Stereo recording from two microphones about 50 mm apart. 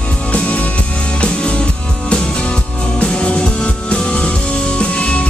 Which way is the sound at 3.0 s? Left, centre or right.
Left.